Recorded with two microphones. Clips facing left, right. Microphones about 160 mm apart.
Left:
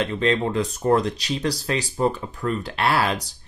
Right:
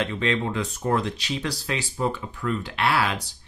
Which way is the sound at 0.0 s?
40° left (ahead or behind).